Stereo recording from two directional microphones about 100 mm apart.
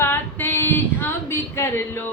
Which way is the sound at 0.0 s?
20° left (ahead or behind).